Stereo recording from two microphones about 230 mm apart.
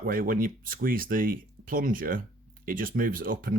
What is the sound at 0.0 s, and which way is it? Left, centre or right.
Speech, right.